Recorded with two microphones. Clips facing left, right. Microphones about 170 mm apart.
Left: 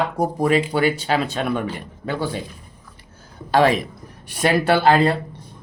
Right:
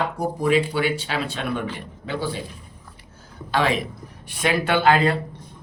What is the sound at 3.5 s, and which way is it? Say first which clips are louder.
Speech: left 5 dB; 45° left (ahead or behind).